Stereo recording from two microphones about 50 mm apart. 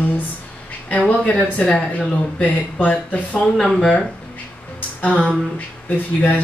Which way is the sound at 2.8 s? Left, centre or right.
Left.